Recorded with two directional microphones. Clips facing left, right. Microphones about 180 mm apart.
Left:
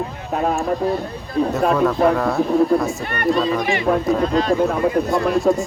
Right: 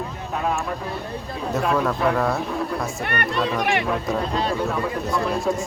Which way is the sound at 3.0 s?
65° right (ahead or behind).